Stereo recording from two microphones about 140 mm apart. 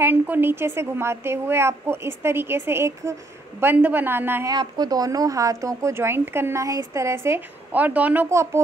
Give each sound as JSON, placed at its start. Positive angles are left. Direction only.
{"t": 0.0, "sound": "a woman's voice", "side_deg": -15}
{"t": 4.5, "sound": "speech", "side_deg": -30}